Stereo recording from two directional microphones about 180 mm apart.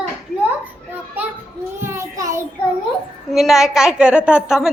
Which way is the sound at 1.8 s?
15° right (ahead or behind).